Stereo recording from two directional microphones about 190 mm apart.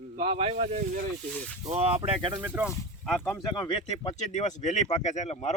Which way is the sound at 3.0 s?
10° left (ahead or behind).